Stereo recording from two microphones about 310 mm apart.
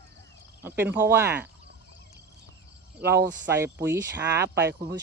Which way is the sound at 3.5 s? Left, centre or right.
Centre.